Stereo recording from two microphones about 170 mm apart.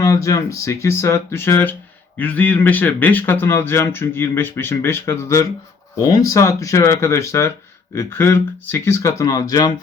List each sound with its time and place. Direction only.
0.0 s speech: 20° left (ahead or behind)